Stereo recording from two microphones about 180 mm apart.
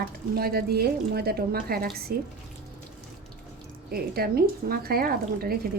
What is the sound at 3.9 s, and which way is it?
Speech, 55° right (ahead or behind).